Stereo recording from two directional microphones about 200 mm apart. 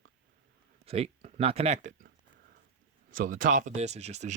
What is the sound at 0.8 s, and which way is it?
Speech, 30° right (ahead or behind).